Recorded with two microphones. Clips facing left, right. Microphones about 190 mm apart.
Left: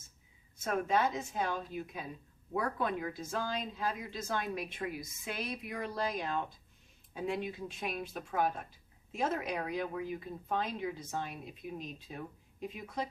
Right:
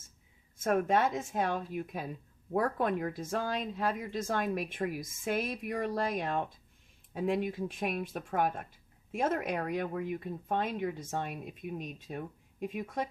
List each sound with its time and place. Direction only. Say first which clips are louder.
0.6 s speech: right 3 dB; 50° right (ahead or behind)